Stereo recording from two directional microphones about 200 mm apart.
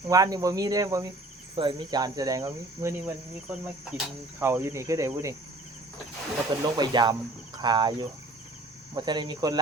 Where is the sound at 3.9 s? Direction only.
10° right (ahead or behind).